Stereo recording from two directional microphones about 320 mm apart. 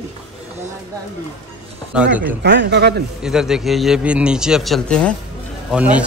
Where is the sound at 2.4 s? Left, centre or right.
Right.